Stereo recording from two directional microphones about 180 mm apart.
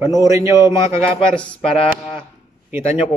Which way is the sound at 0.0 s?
20° right (ahead or behind).